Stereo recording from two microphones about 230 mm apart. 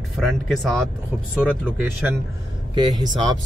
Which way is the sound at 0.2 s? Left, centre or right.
Centre.